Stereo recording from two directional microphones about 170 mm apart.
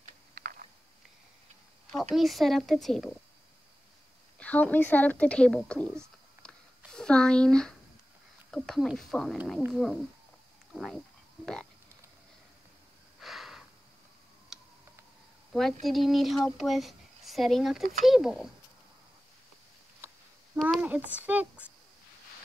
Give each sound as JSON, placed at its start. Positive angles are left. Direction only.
{"t": 0.3, "sound": "typing", "side_deg": -55}
{"t": 2.1, "sound": "speech", "side_deg": 0}
{"t": 4.4, "sound": "a woman's voice", "side_deg": 10}
{"t": 6.4, "sound": "a sound", "side_deg": 5}
{"t": 8.5, "sound": "speech", "side_deg": 0}
{"t": 10.7, "sound": "pig", "side_deg": 0}
{"t": 13.2, "sound": "a sound", "side_deg": 0}
{"t": 14.5, "sound": "tick", "side_deg": 0}
{"t": 15.5, "sound": "speech", "side_deg": 0}
{"t": 20.5, "sound": "a child's voice", "side_deg": 0}